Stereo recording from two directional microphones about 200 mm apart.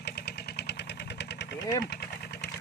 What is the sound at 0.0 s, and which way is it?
Vehicle, 55° left (ahead or behind).